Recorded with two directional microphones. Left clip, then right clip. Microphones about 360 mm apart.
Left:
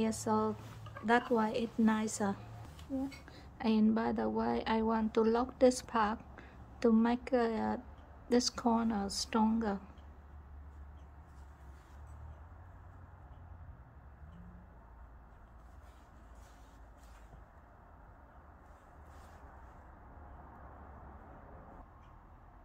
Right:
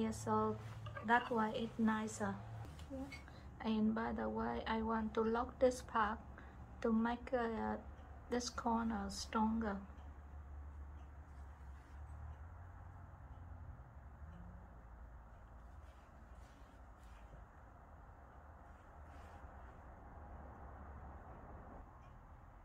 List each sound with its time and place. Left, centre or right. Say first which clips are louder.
0.0 s a woman's voice: left 5 dB; left